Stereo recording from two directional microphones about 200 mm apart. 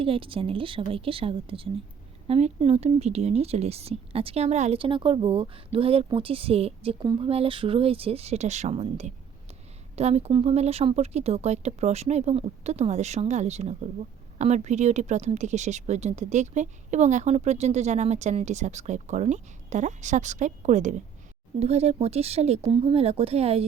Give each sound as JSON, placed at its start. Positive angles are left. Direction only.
{"t": 0.0, "sound": "speech", "side_deg": -25}